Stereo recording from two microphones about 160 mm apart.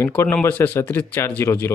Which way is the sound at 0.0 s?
10° left (ahead or behind).